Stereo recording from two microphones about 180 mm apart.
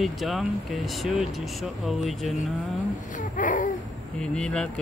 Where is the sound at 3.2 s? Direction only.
45° left (ahead or behind).